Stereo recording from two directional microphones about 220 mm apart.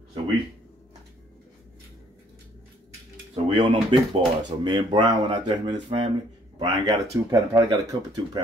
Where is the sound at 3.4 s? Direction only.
25° right (ahead or behind).